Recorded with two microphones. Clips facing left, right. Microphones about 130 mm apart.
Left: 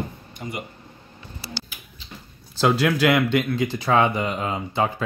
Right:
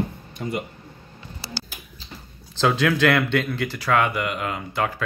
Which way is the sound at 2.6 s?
10° left (ahead or behind).